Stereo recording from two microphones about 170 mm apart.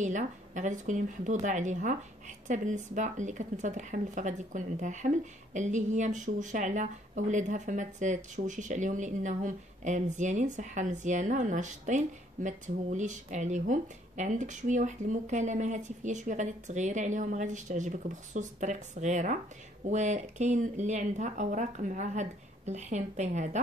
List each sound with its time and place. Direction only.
0.0 s speech: 45° right (ahead or behind)